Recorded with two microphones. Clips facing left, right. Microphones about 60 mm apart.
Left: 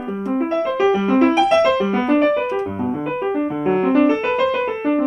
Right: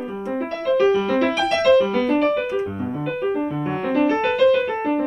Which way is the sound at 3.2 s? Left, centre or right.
Left.